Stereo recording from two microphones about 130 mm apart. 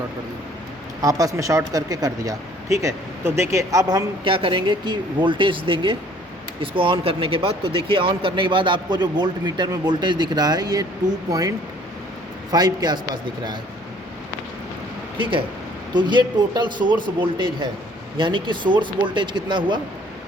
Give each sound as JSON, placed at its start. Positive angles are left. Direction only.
{"t": 1.0, "sound": "speech", "side_deg": -25}
{"t": 4.2, "sound": "speech", "side_deg": -40}
{"t": 15.2, "sound": "speech", "side_deg": -40}
{"t": 18.2, "sound": "speech", "side_deg": -40}